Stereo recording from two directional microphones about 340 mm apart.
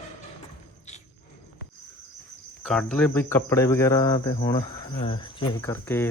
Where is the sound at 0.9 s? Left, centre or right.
Centre.